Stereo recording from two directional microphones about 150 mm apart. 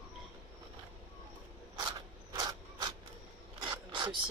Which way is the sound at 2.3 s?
25° right (ahead or behind).